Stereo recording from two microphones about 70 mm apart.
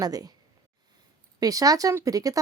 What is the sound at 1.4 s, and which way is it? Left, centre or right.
Speech, right.